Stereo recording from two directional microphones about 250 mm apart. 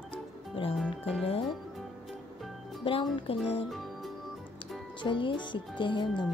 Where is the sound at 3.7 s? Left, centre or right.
Centre.